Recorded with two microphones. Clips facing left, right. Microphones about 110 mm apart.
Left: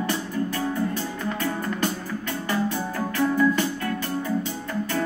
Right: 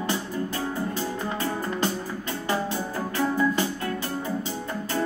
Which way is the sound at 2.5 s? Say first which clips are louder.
Left 1 dB; 25° right (ahead or behind).